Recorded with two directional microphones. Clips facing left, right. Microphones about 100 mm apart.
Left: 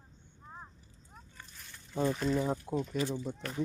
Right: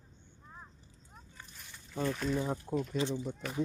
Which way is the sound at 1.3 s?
5° right (ahead or behind).